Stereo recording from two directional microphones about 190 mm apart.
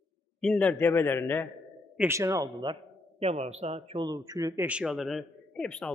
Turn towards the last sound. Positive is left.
turn(degrees=5)  # may be behind; listen again after turning